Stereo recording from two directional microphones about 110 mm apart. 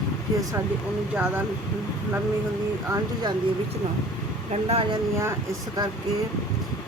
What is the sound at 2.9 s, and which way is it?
Speech, 40° right (ahead or behind).